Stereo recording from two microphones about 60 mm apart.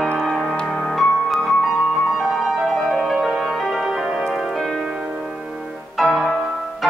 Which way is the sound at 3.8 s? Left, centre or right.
Centre.